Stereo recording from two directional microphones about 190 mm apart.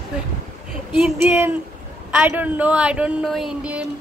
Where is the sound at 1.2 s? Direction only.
10° right (ahead or behind).